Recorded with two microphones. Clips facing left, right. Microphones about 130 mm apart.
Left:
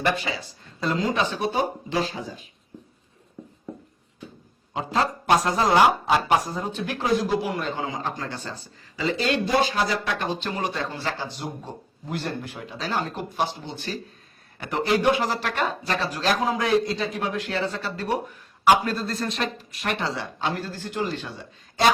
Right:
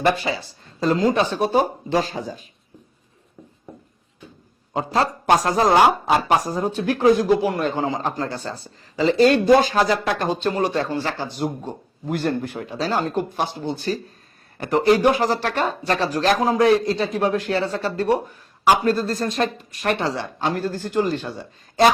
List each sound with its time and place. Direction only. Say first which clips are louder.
0.3 s speech: right 5 dB; 35° right (ahead or behind)
4.7 s a man's voice: right 3 dB; 40° right (ahead or behind)